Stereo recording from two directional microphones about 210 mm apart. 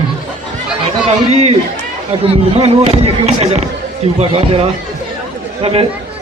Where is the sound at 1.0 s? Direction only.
30° right (ahead or behind).